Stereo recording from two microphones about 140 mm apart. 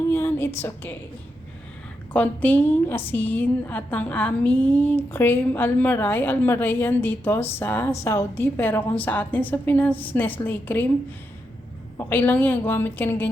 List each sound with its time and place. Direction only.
0.1 s a woman's voice: 15° left (ahead or behind)
2.1 s a woman's voice: 10° left (ahead or behind)
11.9 s a woman's voice: 15° left (ahead or behind)